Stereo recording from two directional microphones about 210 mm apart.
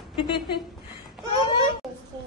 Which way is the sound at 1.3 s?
25° left (ahead or behind).